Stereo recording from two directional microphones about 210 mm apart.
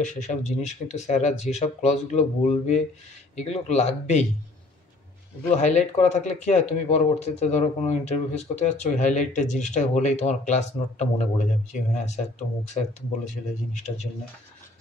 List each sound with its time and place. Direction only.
0.0 s speech: 35° left (ahead or behind)
5.6 s speech: 35° left (ahead or behind)